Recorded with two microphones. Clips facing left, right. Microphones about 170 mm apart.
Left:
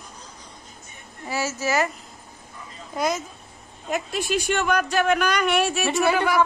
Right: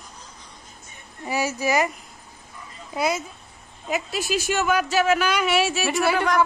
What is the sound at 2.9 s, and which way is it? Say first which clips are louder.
Speech: right 1 dB; 10° right (ahead or behind).